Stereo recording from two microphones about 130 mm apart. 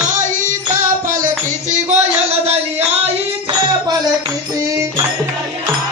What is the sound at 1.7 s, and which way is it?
Music, 60° right (ahead or behind).